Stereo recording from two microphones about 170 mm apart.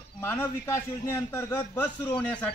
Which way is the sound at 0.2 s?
15° left (ahead or behind).